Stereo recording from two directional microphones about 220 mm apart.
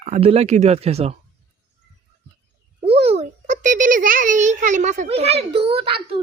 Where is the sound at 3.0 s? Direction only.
30° right (ahead or behind).